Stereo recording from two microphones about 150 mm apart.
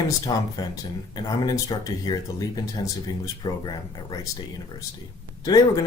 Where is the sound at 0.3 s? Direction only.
25° left (ahead or behind).